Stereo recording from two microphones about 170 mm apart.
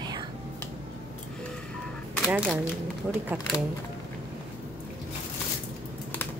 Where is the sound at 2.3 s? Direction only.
5° right (ahead or behind).